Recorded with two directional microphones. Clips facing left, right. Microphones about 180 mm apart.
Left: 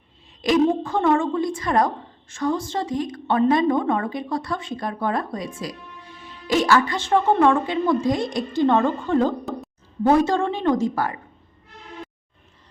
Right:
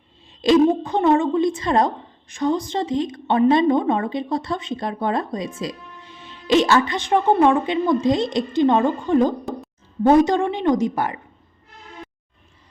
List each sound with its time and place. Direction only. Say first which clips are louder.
0.4 s a woman's voice: right 3 dB; 30° right (ahead or behind)